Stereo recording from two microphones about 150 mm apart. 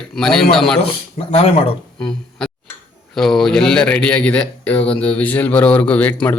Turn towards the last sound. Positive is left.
turn(degrees=10)  # may be behind; listen again after turning